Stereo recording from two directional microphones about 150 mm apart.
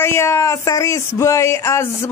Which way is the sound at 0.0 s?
15° left (ahead or behind).